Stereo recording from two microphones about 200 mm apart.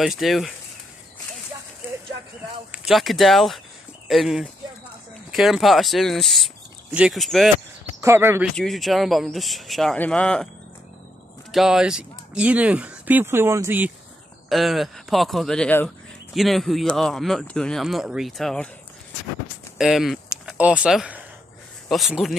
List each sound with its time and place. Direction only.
0.0 s speech: centre (ahead or behind)
2.7 s speech: centre (ahead or behind)
8.0 s speech: 10° right (ahead or behind)
8.5 s speech: centre (ahead or behind)
11.5 s speech: centre (ahead or behind)
19.8 s speech: centre (ahead or behind)